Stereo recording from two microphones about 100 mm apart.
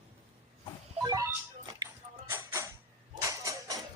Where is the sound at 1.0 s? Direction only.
35° right (ahead or behind).